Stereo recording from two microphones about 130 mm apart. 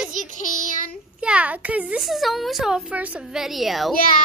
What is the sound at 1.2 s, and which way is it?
A child's voice, 10° right (ahead or behind).